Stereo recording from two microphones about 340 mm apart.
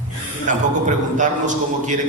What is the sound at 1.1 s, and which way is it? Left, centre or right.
Speech, right.